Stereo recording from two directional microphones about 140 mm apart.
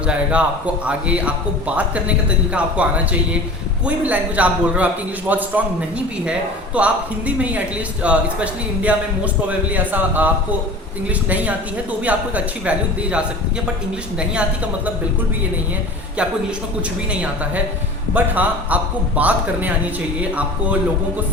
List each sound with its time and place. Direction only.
0.0 s a man's voice: 10° right (ahead or behind)
6.7 s a man's voice: 10° right (ahead or behind)
17.1 s a man's voice: 10° right (ahead or behind)